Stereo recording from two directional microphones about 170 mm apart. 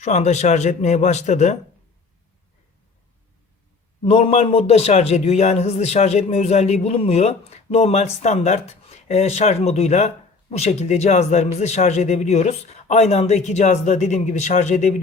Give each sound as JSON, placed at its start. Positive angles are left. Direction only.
{"t": 0.0, "sound": "speech", "side_deg": 45}
{"t": 4.0, "sound": "a man's voice", "side_deg": 35}